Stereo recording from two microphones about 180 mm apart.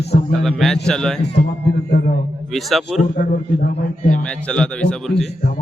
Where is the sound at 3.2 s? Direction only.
60° left (ahead or behind).